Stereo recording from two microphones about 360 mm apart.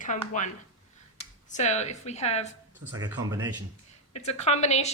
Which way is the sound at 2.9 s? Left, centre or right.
Centre.